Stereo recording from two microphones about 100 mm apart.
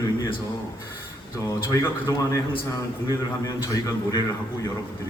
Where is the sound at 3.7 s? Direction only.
40° left (ahead or behind).